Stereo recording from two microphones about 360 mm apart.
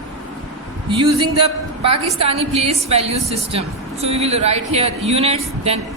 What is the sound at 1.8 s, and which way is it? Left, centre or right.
A woman's voice, centre.